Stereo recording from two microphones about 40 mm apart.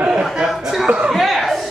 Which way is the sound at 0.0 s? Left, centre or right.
Centre.